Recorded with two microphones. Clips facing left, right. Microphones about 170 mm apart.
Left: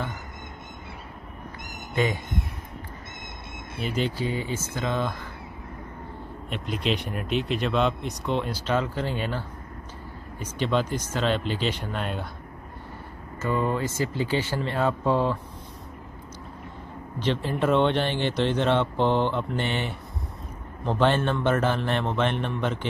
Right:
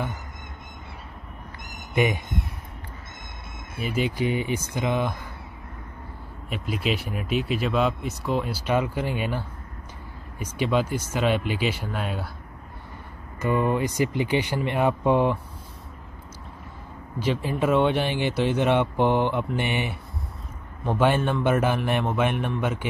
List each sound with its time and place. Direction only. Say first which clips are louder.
2.0 s speech: right 2 dB; 15° right (ahead or behind)
3.8 s speech: right 1 dB; 5° right (ahead or behind)
4.2 s speech: right 3 dB; 20° right (ahead or behind)
6.5 s speech: right 1 dB; 5° right (ahead or behind)
10.4 s speech: right 1 dB; 10° right (ahead or behind)
13.4 s speech: right 3 dB; 15° right (ahead or behind)
17.2 s speech: right 1 dB; 10° right (ahead or behind)